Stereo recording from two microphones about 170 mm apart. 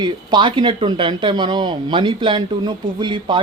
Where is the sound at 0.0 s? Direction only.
25° right (ahead or behind).